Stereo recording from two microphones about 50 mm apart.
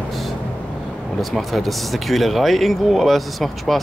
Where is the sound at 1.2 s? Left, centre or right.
Centre.